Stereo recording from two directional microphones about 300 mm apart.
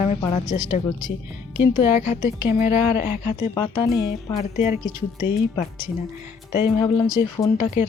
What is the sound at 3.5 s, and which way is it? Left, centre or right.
Speech, centre.